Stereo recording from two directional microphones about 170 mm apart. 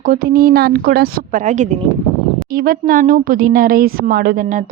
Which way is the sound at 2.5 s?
60° right (ahead or behind).